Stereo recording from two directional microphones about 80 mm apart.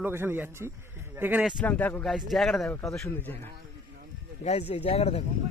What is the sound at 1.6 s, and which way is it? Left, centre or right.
Speech, left.